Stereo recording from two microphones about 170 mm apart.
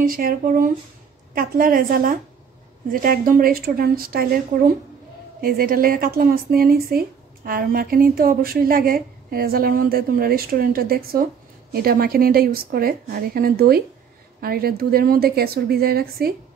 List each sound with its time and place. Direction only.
0.0 s speech: 55° right (ahead or behind)